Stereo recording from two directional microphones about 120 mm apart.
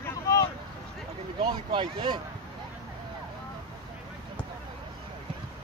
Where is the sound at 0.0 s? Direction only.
25° left (ahead or behind).